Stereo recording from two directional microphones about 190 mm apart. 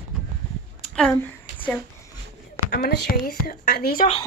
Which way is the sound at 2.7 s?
55° left (ahead or behind).